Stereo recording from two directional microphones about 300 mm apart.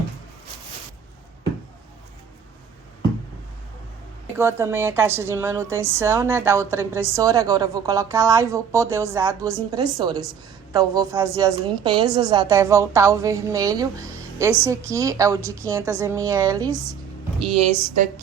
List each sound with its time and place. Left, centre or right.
4.4 s a woman's voice: centre
17.7 s speech: left